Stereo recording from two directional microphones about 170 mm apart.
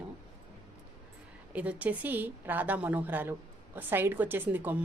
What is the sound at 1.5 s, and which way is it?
A woman's voice, 10° right (ahead or behind).